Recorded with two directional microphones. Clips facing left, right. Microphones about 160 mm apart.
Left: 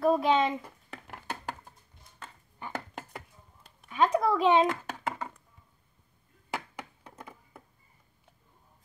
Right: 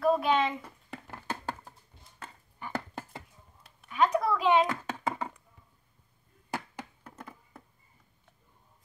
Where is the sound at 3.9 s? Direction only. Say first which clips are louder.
Left 1 dB; 25° left (ahead or behind).